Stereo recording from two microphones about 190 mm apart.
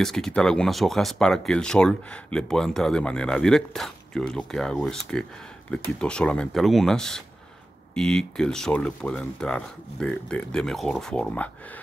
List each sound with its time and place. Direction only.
0.0 s speech: centre (ahead or behind)